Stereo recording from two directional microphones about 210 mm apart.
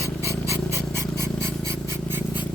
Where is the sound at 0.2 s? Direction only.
15° right (ahead or behind).